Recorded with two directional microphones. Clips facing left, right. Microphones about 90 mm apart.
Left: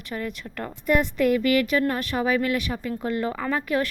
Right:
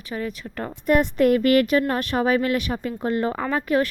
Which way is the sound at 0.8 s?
45° right (ahead or behind).